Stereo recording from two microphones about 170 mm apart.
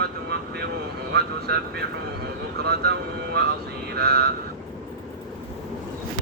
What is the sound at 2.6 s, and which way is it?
Speech, 70° right (ahead or behind).